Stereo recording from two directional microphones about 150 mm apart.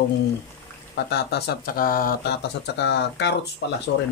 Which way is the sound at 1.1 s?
90° left.